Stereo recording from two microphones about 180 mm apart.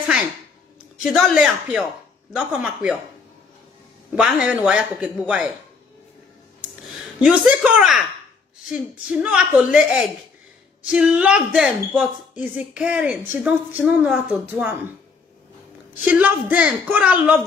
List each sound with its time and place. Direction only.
1.0 s a man's voice: centre (ahead or behind)
4.1 s a man's voice: 5° right (ahead or behind)
6.9 s a woman's voice: centre (ahead or behind)
9.1 s a man's voice: 5° right (ahead or behind)
16.1 s a woman's voice: 10° right (ahead or behind)